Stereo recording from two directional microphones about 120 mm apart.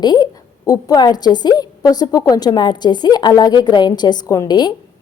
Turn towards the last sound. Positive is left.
turn(degrees=35)  # may be behind; listen again after turning